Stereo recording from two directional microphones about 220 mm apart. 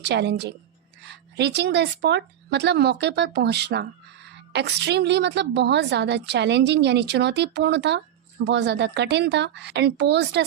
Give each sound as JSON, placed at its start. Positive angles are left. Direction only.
{"t": 0.0, "sound": "a woman's voice", "side_deg": -50}